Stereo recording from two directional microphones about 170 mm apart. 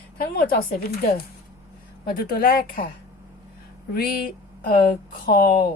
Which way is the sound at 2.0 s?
60° left (ahead or behind).